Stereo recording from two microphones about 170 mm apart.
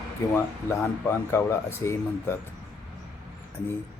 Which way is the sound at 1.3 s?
15° left (ahead or behind).